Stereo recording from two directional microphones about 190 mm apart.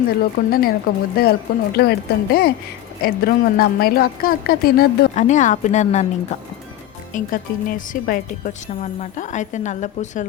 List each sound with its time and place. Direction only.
0.2 s a woman's voice: 50° left (ahead or behind)
5.2 s a woman's voice: 40° left (ahead or behind)
7.1 s a woman's voice: 45° left (ahead or behind)